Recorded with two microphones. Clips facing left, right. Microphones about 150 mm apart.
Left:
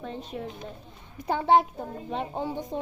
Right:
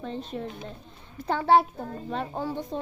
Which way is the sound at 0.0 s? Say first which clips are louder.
Right 2 dB; 10° left (ahead or behind).